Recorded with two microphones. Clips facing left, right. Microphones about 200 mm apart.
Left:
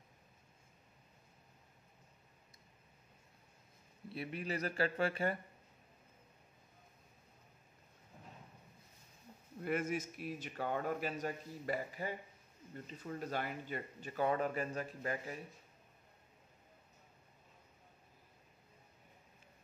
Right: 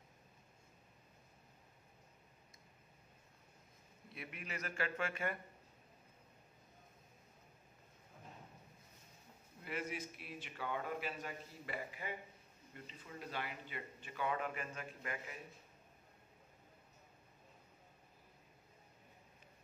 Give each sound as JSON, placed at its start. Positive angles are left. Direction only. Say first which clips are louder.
{"t": 4.1, "sound": "speech", "louder": "left 8 dB", "side_deg": 35}
{"t": 9.6, "sound": "speech", "louder": "left 7 dB", "side_deg": 50}